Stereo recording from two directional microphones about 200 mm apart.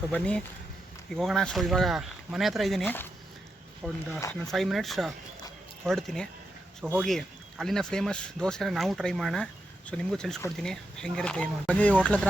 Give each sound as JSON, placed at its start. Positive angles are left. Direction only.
{"t": 0.1, "sound": "speech", "side_deg": 5}
{"t": 4.2, "sound": "speech", "side_deg": 15}
{"t": 4.5, "sound": "speech", "side_deg": 0}